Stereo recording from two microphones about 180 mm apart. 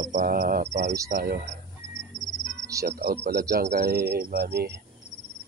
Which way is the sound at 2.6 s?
20° right (ahead or behind).